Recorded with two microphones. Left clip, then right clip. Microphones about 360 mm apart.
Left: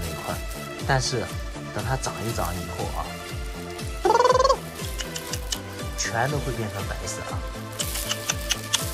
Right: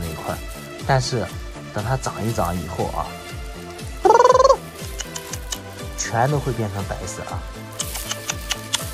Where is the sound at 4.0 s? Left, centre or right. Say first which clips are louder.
Right 6 dB; centre.